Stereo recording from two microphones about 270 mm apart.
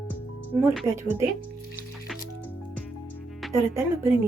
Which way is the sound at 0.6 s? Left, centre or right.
Centre.